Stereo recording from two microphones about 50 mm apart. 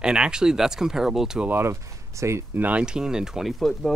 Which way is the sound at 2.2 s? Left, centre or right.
Right.